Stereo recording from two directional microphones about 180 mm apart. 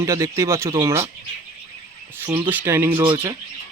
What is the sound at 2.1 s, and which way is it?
Speech, 15° right (ahead or behind).